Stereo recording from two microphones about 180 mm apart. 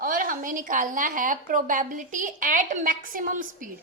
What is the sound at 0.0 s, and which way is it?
A woman's voice, 50° right (ahead or behind).